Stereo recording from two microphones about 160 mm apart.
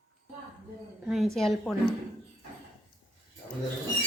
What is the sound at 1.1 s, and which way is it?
Speech, centre (ahead or behind).